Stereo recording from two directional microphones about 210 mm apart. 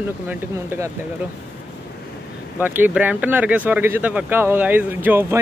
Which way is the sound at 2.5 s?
10° right (ahead or behind).